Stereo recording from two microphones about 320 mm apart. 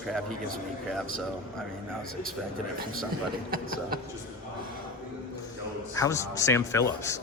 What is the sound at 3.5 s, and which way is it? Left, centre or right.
Speech, right.